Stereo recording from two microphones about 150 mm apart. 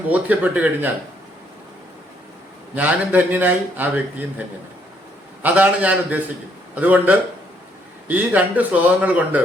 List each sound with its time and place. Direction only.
0.1 s a man's voice: 10° right (ahead or behind)
2.7 s a man's voice: 10° right (ahead or behind)